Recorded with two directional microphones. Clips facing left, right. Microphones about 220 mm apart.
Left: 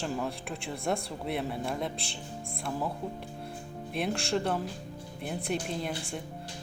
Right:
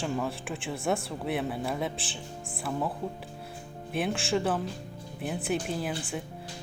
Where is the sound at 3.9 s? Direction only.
Centre (ahead or behind).